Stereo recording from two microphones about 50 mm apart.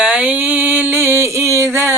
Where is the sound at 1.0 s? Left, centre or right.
Right.